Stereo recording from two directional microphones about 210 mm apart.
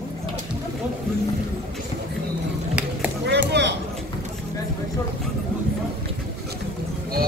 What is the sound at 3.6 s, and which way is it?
Clip-clop, 55° right (ahead or behind).